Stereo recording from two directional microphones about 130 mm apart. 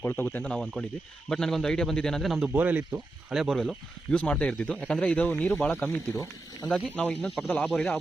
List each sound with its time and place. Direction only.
0.0 s a man's voice: 15° left (ahead or behind); by 2.5 s centre (ahead or behind)
2.5 s speech: 10° right (ahead or behind); by 6.7 s 20° left (ahead or behind)
6.7 s speech: 10° left (ahead or behind)